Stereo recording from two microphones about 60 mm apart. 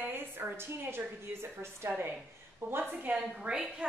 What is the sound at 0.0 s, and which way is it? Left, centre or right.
A woman's voice, right.